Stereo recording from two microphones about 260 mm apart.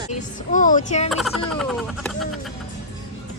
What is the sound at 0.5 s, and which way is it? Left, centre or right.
Speech, left.